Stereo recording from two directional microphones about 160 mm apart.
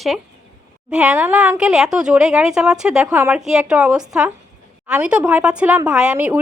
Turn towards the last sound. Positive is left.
turn(degrees=-10)  # may be behind; listen again after turning